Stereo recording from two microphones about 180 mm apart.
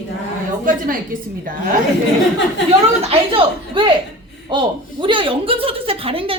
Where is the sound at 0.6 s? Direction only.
50° right (ahead or behind).